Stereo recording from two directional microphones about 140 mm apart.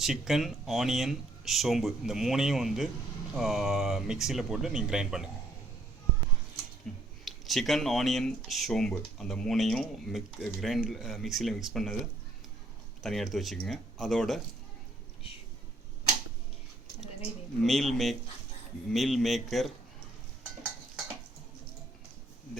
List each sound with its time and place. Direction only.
0.0 s speech: centre (ahead or behind)
6.9 s speech: centre (ahead or behind)
13.0 s speech: centre (ahead or behind)
17.6 s speech: centre (ahead or behind)